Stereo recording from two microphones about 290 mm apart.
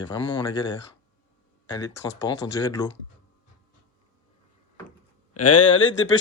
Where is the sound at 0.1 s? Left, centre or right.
Centre.